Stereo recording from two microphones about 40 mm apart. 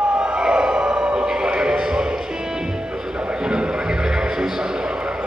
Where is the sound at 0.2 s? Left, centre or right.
Right.